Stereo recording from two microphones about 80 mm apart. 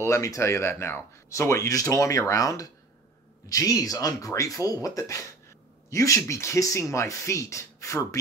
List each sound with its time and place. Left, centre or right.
0.0 s speech: left